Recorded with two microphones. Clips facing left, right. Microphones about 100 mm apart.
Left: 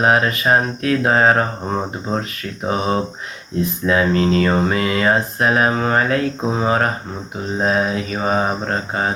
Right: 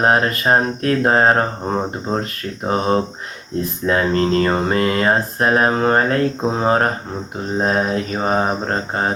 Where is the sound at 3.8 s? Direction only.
40° right (ahead or behind).